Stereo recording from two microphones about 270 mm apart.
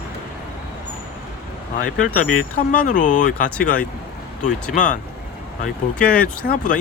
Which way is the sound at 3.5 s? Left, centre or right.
Centre.